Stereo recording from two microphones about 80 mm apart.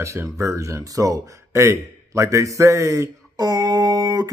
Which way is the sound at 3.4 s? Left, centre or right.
Right.